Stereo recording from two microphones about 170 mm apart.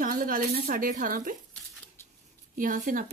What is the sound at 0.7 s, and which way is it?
Speech, 55° right (ahead or behind).